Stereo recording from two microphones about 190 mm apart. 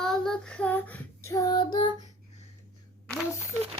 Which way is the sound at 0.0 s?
5° left (ahead or behind).